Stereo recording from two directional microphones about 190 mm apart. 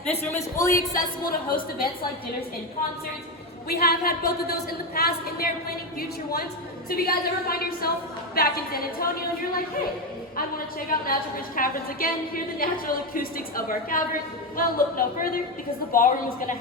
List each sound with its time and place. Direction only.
0.2 s speech: 15° left (ahead or behind)
0.7 s a woman's voice: 45° left (ahead or behind)
3.7 s a woman's voice: 55° left (ahead or behind)